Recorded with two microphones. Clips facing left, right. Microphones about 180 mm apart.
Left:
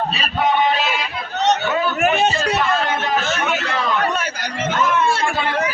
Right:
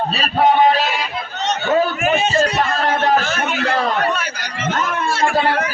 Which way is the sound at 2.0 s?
65° left (ahead or behind).